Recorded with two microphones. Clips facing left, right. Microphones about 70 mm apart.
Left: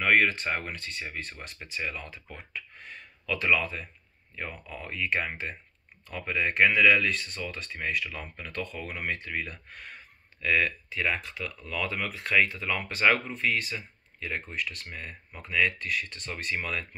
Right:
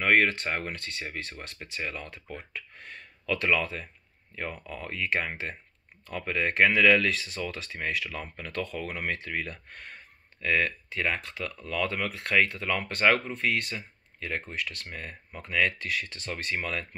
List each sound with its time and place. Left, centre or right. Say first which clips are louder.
0.0 s speech: even; right
1.6 s speech: left 1 dB; right
10.4 s speech: even; right
14.9 s speech: right 1 dB; right
15.8 s speech: even; right